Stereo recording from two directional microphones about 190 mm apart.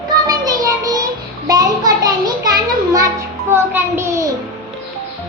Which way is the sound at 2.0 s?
20° right (ahead or behind).